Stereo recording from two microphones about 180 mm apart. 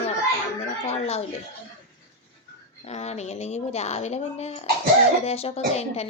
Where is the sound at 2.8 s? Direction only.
35° left (ahead or behind).